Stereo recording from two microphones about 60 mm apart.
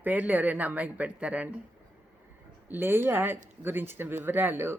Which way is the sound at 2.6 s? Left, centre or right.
Right.